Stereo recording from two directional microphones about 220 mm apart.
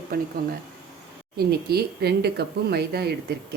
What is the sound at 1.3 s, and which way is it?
Speech, 45° right (ahead or behind).